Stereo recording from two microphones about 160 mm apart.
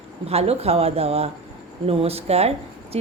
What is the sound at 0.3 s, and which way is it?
A woman's voice, 40° right (ahead or behind).